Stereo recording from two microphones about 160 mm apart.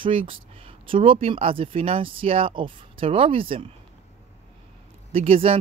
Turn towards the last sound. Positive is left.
turn(degrees=-35)  # may be behind; listen again after turning